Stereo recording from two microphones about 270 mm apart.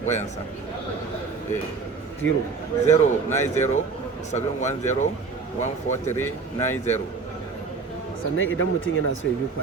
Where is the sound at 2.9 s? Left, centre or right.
Left.